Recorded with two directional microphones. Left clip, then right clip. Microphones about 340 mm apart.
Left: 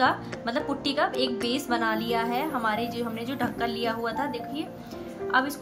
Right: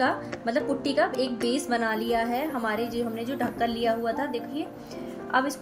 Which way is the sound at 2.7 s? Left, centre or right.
Left.